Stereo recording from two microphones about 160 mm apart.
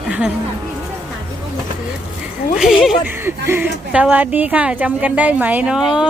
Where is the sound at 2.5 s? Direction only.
Centre (ahead or behind).